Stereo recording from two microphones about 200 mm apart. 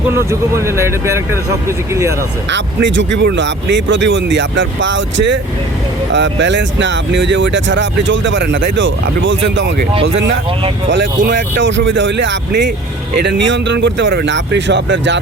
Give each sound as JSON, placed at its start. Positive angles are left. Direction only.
{"t": 0.1, "sound": "speech", "side_deg": -15}
{"t": 2.5, "sound": "speech", "side_deg": -65}
{"t": 9.9, "sound": "speech", "side_deg": -30}
{"t": 10.9, "sound": "speech", "side_deg": -60}